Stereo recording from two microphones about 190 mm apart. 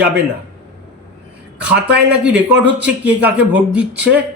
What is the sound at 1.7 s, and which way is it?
Speech, 60° right (ahead or behind).